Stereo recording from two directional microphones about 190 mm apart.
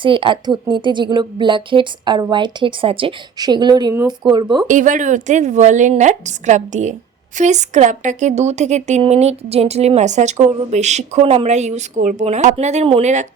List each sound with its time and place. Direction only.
0.0 s a woman's voice: 25° right (ahead or behind)
4.7 s speech: 40° right (ahead or behind)